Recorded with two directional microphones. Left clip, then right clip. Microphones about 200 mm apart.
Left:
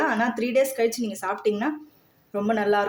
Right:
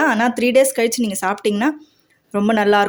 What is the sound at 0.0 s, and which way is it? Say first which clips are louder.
Speech: right 7 dB; 45° right (ahead or behind).